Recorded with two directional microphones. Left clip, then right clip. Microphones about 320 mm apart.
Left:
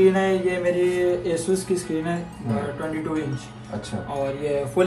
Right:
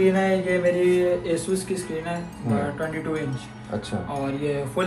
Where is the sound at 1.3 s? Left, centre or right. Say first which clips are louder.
Left 2 dB; left.